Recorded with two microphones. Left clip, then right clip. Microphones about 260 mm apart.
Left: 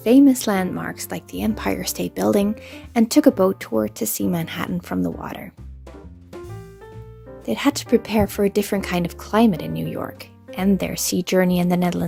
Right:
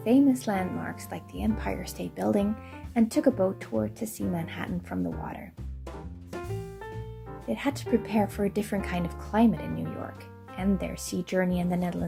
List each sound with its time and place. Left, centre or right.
0.0 s a woman's voice: left
7.4 s a woman's voice: left